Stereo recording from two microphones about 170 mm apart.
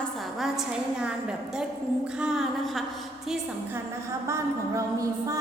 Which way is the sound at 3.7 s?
15° right (ahead or behind).